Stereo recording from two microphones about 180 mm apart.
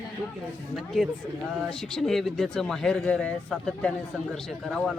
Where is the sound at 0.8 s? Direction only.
Centre (ahead or behind).